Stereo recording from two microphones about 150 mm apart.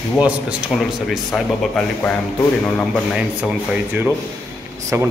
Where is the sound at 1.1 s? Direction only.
Centre (ahead or behind).